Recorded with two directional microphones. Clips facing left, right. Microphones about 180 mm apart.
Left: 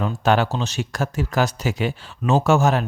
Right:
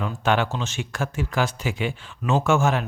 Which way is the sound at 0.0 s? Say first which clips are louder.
Left 3 dB; 40° left (ahead or behind).